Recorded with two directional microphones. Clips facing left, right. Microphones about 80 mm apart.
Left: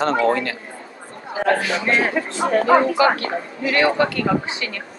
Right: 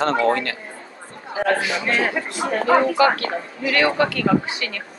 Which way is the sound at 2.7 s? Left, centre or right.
Left.